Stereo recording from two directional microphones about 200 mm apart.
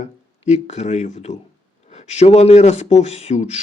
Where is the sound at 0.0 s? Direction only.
35° left (ahead or behind).